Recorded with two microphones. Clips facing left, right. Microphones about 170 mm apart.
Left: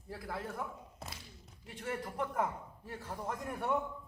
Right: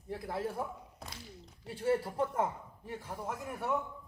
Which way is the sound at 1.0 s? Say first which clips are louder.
Left 2 dB; centre (ahead or behind).